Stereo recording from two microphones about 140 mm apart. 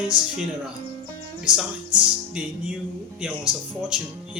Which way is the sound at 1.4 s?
5° right (ahead or behind).